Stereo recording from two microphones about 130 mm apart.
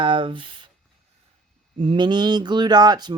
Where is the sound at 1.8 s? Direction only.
40° right (ahead or behind).